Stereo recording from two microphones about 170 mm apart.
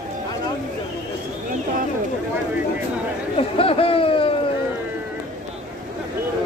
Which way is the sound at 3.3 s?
35° left (ahead or behind).